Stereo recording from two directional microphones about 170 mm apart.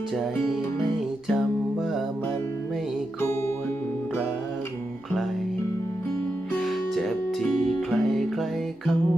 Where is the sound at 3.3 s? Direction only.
15° left (ahead or behind).